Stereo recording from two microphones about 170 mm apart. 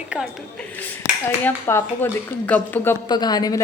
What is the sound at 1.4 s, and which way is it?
Speech, 15° left (ahead or behind).